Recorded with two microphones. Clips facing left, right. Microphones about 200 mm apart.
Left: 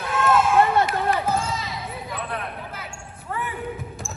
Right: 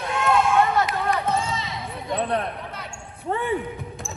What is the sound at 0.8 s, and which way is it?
Basketball bounce, centre (ahead or behind).